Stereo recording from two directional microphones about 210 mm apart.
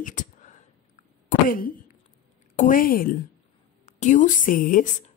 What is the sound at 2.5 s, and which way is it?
Speech, 40° left (ahead or behind).